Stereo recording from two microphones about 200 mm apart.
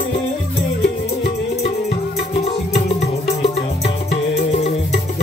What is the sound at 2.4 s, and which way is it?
Music, 30° left (ahead or behind).